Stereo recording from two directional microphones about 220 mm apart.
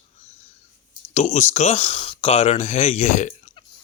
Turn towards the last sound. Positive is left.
turn(degrees=30)  # may be behind; listen again after turning